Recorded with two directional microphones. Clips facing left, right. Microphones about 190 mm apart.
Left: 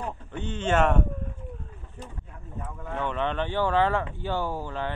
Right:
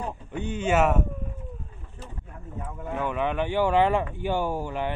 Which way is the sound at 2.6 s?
10° right (ahead or behind).